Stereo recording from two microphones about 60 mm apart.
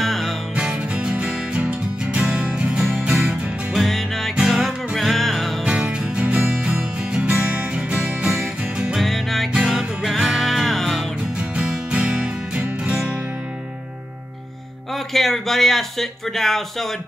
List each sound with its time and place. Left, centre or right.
0.0 s music: centre
0.6 s music: centre
3.8 s music: centre
5.6 s music: centre
8.9 s music: centre
11.3 s music: centre
15.1 s speech: centre